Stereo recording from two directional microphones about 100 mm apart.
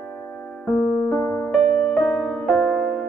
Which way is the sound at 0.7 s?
5° left (ahead or behind).